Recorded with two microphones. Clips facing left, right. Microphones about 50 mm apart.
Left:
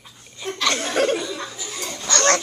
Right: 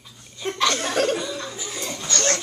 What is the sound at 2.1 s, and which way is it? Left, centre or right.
Dog, left.